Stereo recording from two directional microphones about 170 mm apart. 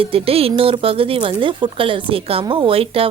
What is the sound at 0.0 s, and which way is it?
A woman's voice, 35° right (ahead or behind).